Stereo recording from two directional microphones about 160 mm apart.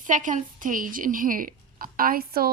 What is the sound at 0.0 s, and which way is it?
A woman's voice, 55° right (ahead or behind).